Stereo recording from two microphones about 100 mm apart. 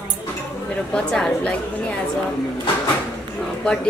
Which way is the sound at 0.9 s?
10° left (ahead or behind).